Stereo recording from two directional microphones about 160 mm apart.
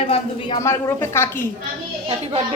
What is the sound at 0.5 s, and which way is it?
Speech, 15° left (ahead or behind).